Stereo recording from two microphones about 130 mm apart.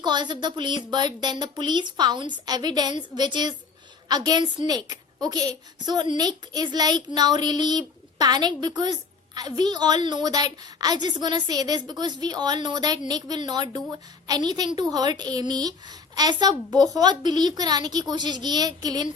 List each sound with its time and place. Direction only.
0.0 s a woman's voice: 35° right (ahead or behind)